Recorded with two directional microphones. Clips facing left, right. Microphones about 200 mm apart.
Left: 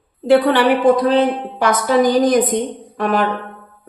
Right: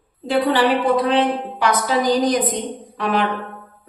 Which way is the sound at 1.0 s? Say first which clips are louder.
Left 3 dB; 45° left (ahead or behind).